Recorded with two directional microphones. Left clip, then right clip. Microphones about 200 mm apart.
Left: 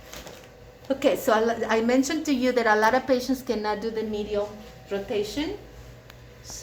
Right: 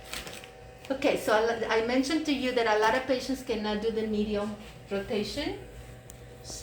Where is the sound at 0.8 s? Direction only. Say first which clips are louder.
Left 4 dB; 50° left (ahead or behind).